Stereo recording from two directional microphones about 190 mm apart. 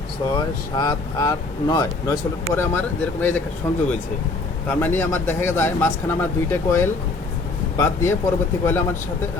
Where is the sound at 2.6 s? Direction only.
10° left (ahead or behind).